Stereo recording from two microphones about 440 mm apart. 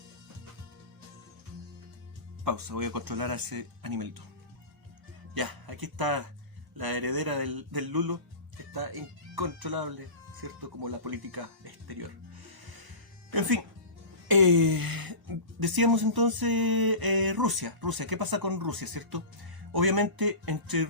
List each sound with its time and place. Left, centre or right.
2.4 s speech: right
5.3 s speech: right
13.3 s speech: right